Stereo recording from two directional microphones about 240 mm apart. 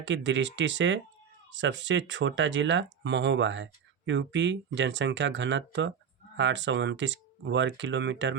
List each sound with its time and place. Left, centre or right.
0.0 s speech: right